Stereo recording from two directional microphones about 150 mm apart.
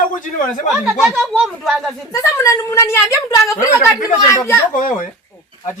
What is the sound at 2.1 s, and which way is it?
A woman's voice, 20° left (ahead or behind).